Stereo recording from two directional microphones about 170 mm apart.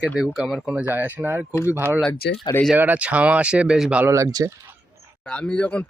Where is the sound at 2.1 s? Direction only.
70° left (ahead or behind).